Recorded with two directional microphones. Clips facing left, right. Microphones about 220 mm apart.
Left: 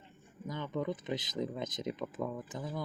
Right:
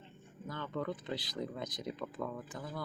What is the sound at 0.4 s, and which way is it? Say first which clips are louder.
Speech: left 3 dB; 15° left (ahead or behind).